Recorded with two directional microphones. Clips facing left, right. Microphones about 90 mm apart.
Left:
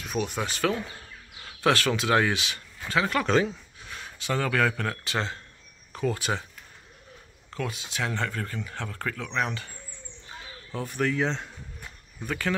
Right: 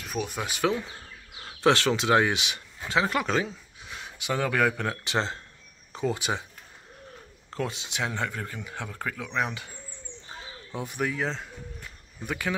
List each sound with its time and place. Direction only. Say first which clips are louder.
0.0 s speech: left 2 dB; centre (ahead or behind); by 3.3 s 20° right (ahead or behind)
3.3 s speech: left 4 dB; 5° right (ahead or behind)
3.8 s speech: even; 15° right (ahead or behind)
7.5 s a man's voice: right 1 dB; 25° right (ahead or behind); by 11.5 s centre (ahead or behind)
12.3 s speech: left 1 dB; 15° right (ahead or behind)